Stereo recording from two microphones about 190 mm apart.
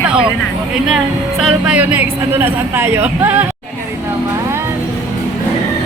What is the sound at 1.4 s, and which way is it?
Speech, 5° right (ahead or behind).